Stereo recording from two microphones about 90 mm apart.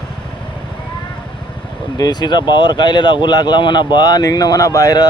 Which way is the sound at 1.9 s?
50° left (ahead or behind).